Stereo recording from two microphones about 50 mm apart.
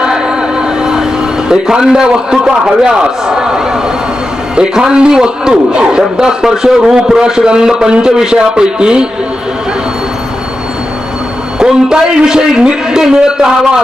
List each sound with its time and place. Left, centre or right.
0.0 s a sound: centre
0.8 s vehicle: centre
1.5 s a man's voice: centre
4.5 s a man's voice: centre
11.6 s a man's voice: centre